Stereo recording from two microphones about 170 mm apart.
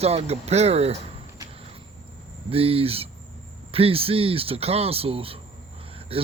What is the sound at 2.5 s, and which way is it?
Speech, 35° right (ahead or behind).